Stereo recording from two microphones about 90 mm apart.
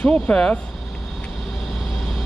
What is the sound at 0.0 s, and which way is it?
Speech, 10° left (ahead or behind).